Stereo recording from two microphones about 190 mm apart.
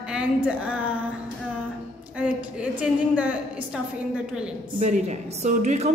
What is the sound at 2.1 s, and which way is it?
A woman's voice, 5° right (ahead or behind).